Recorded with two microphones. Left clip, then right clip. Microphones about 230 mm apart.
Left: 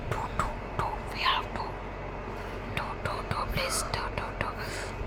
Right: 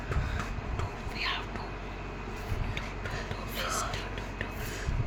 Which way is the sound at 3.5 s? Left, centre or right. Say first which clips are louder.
Left 2 dB; centre.